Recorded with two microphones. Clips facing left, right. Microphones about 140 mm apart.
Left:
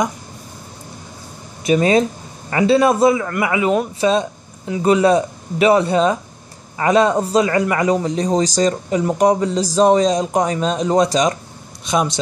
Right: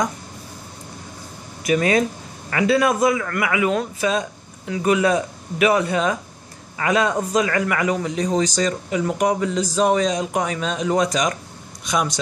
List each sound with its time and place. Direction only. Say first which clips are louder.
1.6 s a man's voice: left 4 dB; 25° left (ahead or behind)